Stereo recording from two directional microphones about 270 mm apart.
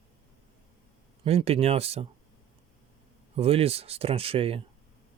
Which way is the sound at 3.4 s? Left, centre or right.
Right.